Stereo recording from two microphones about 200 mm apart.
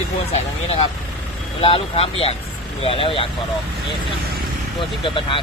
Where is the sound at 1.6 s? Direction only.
30° left (ahead or behind).